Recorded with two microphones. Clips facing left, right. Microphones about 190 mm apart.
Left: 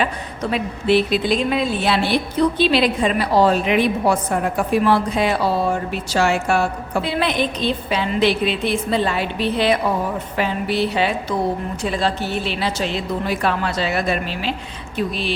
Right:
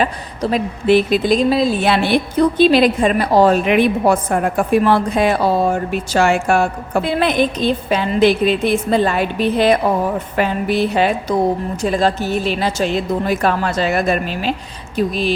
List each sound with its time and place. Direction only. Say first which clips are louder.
0.0 s a woman's voice: right 3 dB; 40° right (ahead or behind)
1.8 s a woman's voice: right 4 dB; 55° right (ahead or behind)